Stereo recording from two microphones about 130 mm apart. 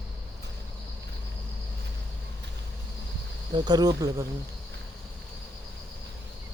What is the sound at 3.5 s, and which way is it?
Speech, 30° right (ahead or behind).